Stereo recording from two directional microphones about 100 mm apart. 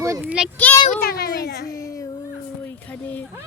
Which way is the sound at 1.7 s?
35° left (ahead or behind).